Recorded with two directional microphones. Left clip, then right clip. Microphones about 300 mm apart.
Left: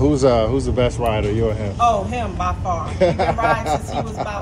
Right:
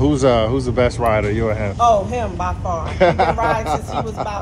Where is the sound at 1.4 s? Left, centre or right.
Right.